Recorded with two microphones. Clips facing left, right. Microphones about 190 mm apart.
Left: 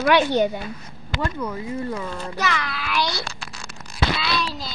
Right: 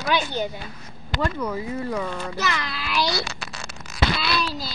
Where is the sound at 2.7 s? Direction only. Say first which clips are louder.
Left 1 dB; 50° left (ahead or behind).